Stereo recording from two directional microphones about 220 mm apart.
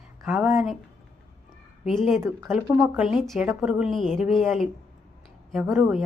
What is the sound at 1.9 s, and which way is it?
A woman's voice, centre (ahead or behind).